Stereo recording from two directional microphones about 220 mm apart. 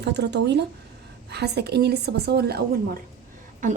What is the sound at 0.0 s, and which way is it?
Speech, 50° right (ahead or behind).